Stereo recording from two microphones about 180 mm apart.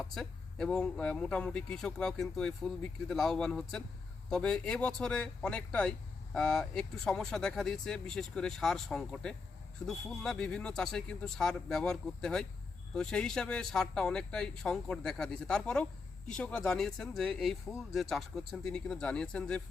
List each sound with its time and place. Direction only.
0.0 s speech: centre (ahead or behind)